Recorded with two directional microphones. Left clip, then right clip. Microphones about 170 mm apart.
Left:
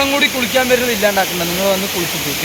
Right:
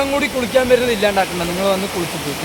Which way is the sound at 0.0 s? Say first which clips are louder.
Left 3 dB; 90° right.